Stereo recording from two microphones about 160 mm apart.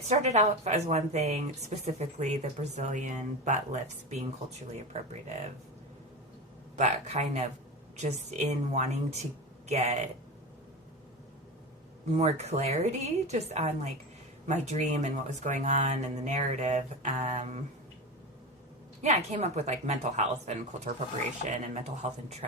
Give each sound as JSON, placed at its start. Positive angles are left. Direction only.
{"t": 0.1, "sound": "speech", "side_deg": -45}
{"t": 6.7, "sound": "speech", "side_deg": -45}
{"t": 12.1, "sound": "speech", "side_deg": -45}
{"t": 19.0, "sound": "speech", "side_deg": -45}